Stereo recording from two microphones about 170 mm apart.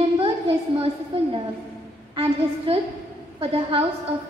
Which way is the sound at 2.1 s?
35° right (ahead or behind).